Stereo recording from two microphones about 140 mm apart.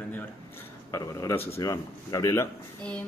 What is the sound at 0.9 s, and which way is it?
Speech, 25° left (ahead or behind).